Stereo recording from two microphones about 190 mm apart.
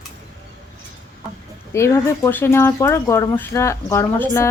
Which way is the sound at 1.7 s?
15° left (ahead or behind).